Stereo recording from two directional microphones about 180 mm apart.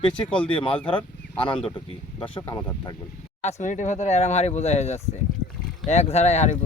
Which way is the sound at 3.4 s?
40° left (ahead or behind).